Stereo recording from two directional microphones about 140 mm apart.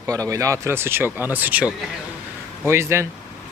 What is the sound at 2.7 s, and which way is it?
Speech, 15° right (ahead or behind).